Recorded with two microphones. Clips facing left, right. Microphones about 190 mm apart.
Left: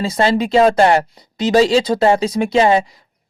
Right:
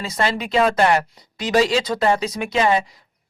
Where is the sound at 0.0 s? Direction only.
30° left (ahead or behind).